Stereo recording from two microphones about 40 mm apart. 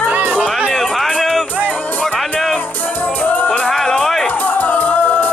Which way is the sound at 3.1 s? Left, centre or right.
Left.